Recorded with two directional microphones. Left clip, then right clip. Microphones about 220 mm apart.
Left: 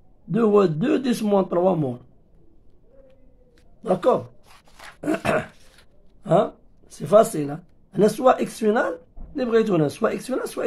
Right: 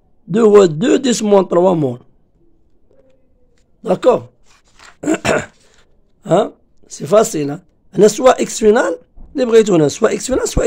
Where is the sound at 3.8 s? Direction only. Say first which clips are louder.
Right 7 dB; 40° right (ahead or behind).